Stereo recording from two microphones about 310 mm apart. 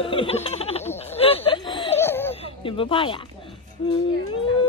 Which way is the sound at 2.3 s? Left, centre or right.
Centre.